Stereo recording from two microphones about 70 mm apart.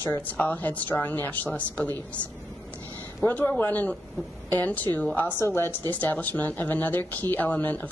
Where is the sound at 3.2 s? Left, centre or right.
Left.